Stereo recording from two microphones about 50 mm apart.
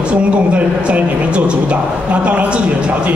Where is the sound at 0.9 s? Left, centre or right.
Right.